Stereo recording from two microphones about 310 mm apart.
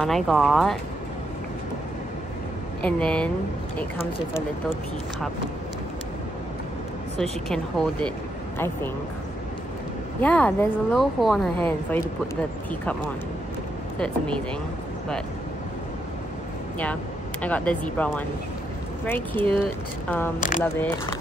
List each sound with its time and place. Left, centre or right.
0.0 s speech: centre
2.8 s speech: centre
7.2 s speech: centre
10.2 s speech: centre
13.9 s speech: centre
16.8 s speech: centre
20.3 s speech: left
20.6 s speech: centre